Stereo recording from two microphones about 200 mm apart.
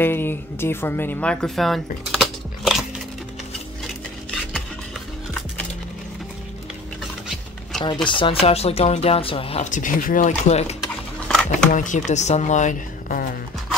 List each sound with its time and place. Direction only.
0.0 s speech: 10° left (ahead or behind)
7.8 s speech: 25° left (ahead or behind)
11.2 s a sound: 5° left (ahead or behind)
11.7 s speech: 40° left (ahead or behind)